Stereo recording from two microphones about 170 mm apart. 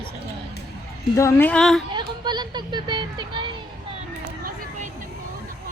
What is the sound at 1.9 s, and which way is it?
Speech, 25° right (ahead or behind).